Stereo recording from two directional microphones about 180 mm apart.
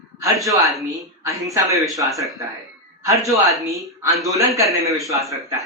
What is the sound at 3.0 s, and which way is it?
A man's voice, 15° right (ahead or behind).